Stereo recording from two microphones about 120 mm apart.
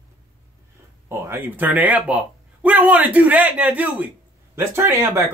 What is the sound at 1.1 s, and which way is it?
Speech, 15° right (ahead or behind).